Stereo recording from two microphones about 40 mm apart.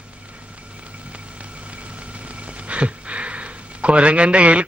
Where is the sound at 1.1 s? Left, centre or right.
Right.